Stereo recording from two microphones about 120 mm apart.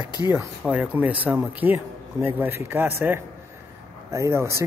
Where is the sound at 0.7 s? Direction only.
10° right (ahead or behind).